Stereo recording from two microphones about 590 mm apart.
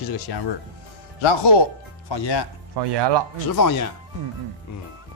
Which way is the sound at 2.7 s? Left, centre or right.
Right.